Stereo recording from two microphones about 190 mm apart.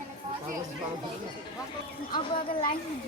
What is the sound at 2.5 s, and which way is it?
Speech, 30° left (ahead or behind).